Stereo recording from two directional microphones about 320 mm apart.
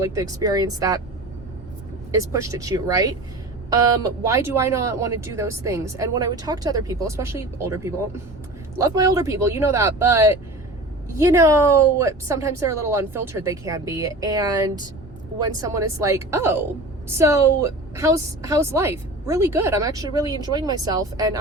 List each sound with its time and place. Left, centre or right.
0.0 s speech: centre
2.1 s speech: centre